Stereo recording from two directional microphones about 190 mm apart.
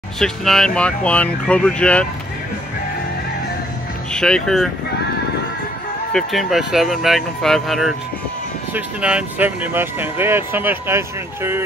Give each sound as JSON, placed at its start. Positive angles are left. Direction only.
{"t": 0.2, "sound": "speech", "side_deg": 0}
{"t": 4.1, "sound": "speech", "side_deg": 5}
{"t": 6.1, "sound": "speech", "side_deg": 0}